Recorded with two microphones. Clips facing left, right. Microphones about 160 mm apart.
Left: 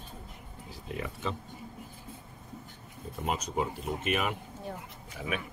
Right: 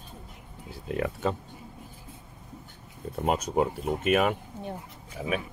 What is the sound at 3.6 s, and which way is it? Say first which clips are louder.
Speech: right 6 dB; 45° right (ahead or behind).